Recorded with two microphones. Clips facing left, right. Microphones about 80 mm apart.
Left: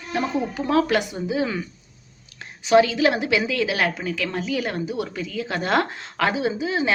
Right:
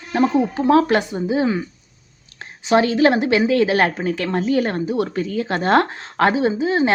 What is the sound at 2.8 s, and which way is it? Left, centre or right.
Speech, right.